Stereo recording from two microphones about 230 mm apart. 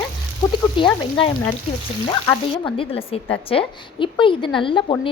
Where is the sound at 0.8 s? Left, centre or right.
Left.